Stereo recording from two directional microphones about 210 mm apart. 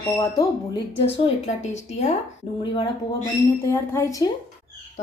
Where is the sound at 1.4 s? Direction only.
35° left (ahead or behind).